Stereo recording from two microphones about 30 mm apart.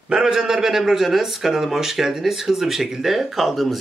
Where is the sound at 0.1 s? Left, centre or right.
Right.